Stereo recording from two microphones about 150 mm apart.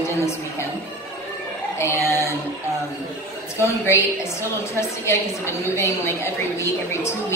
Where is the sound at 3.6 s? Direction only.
20° left (ahead or behind).